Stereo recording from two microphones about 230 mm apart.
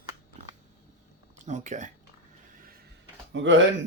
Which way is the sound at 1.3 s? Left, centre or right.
Right.